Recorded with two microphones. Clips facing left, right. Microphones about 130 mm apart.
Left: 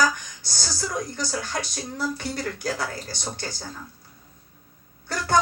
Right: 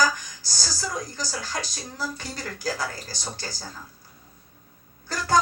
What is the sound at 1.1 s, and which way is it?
Speech, 60° left (ahead or behind).